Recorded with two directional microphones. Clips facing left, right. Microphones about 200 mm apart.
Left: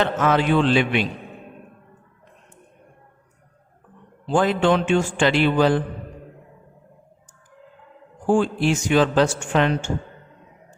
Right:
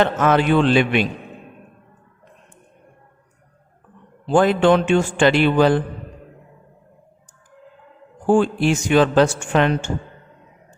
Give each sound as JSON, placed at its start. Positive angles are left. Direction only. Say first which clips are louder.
{"t": 0.0, "sound": "a man's voice", "louder": "right 3 dB", "side_deg": -50}
{"t": 4.3, "sound": "a man's voice", "louder": "right 4 dB", "side_deg": -55}
{"t": 8.4, "sound": "a man's voice", "louder": "right 3 dB", "side_deg": -60}